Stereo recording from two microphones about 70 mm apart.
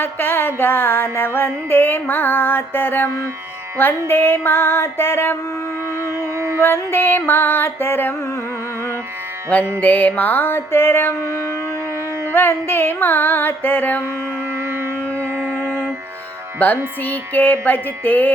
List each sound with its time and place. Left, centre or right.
0.0 s music: left
6.0 s music: right
6.9 s music: left
9.8 s music: left
14.5 s music: right
15.5 s music: left